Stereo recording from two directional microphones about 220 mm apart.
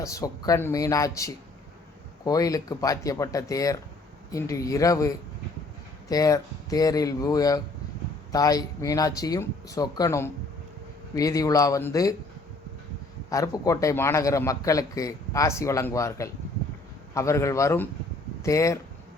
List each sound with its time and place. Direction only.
0.0 s a man's voice: 15° left (ahead or behind)
13.3 s a man's voice: 15° left (ahead or behind)